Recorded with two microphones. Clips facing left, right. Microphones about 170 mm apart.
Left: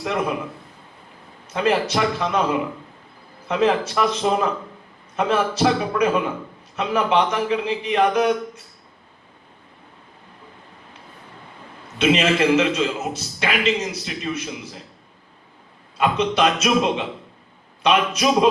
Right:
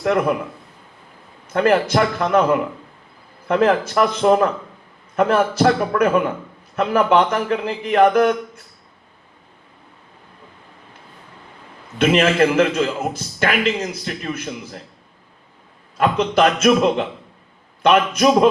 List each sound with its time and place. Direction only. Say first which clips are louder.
0.0 s a man's voice: right 6 dB; 55° right (ahead or behind)
1.5 s a man's voice: right 4 dB; 55° right (ahead or behind)
11.9 s a man's voice: right 3 dB; 55° right (ahead or behind)
16.0 s a man's voice: right 3 dB; 55° right (ahead or behind)